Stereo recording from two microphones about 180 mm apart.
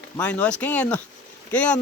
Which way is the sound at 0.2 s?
5° left (ahead or behind).